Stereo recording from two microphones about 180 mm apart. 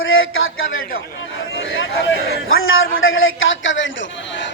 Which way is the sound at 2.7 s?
90° left.